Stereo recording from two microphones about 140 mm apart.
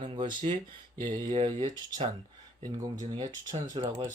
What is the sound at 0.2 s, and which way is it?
Speech, 35° right (ahead or behind).